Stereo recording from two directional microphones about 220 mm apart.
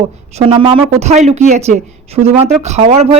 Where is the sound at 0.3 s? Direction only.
25° right (ahead or behind).